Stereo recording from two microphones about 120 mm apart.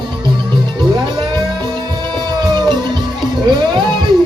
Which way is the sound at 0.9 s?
35° right (ahead or behind).